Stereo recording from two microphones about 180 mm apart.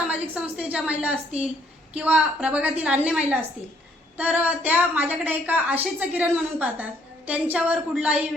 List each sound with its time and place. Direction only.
0.1 s a woman's voice: 5° right (ahead or behind)